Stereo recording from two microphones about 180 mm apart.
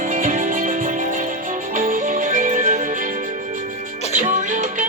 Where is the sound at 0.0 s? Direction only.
50° right (ahead or behind).